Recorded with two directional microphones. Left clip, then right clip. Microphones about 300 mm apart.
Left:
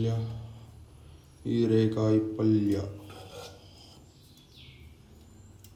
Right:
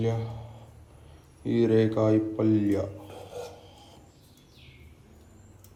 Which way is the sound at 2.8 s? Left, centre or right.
Centre.